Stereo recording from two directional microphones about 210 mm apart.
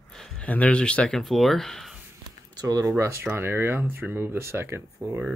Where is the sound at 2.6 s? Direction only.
15° right (ahead or behind).